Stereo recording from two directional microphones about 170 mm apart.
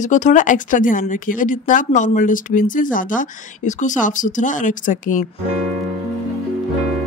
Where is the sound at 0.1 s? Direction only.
45° left (ahead or behind).